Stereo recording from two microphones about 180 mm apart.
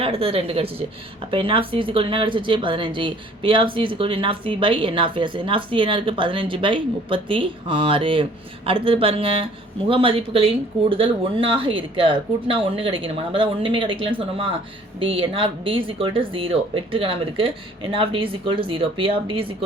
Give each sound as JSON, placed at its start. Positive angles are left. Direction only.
{"t": 0.0, "sound": "speech", "side_deg": -35}